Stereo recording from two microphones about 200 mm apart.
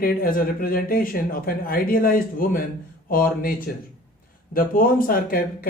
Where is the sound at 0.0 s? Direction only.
45° left (ahead or behind).